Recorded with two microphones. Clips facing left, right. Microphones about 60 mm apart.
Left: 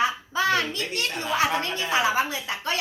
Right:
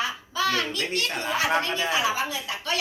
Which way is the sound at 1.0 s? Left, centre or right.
Right.